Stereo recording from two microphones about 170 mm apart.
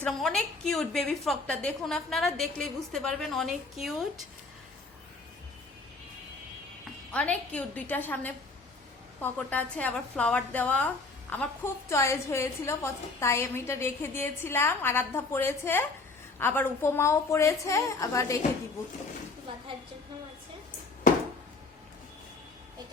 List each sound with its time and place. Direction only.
0.0 s a woman's voice: 5° left (ahead or behind)
7.1 s a woman's voice: 5° left (ahead or behind)